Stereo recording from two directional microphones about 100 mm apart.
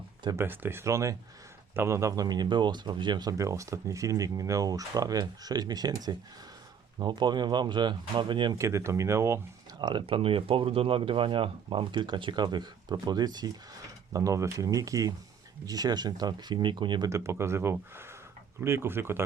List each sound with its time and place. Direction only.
0.3 s speech: 20° right (ahead or behind); by 8.5 s 55° right (ahead or behind)
8.5 s speech: 30° right (ahead or behind)
9.7 s speech: 45° right (ahead or behind)
10.1 s speech: 65° right (ahead or behind); by 17.1 s 50° right (ahead or behind)
17.1 s speech: 30° right (ahead or behind)